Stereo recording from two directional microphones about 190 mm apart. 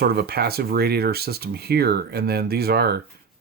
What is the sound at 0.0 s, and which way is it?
Speech, 55° right (ahead or behind).